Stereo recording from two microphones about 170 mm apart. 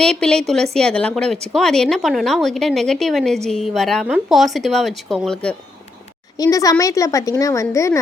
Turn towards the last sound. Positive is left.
turn(degrees=15)  # may be behind; listen again after turning